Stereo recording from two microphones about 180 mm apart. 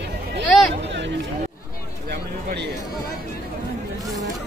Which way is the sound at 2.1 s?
65° right (ahead or behind).